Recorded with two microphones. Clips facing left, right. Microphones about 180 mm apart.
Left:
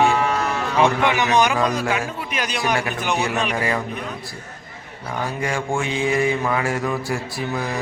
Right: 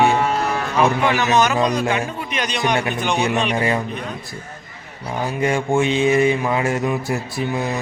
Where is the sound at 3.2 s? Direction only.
20° right (ahead or behind).